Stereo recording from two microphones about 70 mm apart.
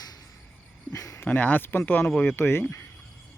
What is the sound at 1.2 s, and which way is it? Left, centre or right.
Speech, left.